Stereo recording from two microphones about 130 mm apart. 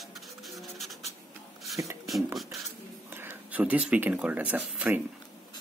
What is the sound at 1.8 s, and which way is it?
Speech, 20° right (ahead or behind).